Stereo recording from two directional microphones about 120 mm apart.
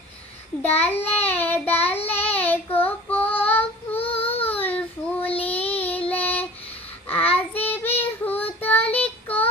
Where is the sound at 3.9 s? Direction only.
55° left (ahead or behind).